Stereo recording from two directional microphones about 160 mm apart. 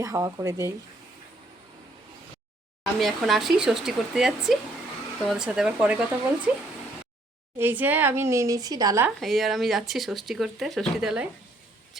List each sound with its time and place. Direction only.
0.0 s speech: 20° right (ahead or behind)
2.8 s a woman's voice: centre (ahead or behind)
7.6 s a woman's voice: 10° right (ahead or behind)
9.0 s speech: centre (ahead or behind)